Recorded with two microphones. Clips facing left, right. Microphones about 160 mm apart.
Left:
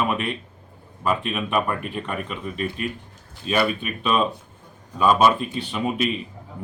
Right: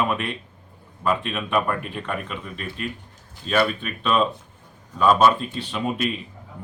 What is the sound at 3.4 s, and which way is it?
Speech, 10° left (ahead or behind).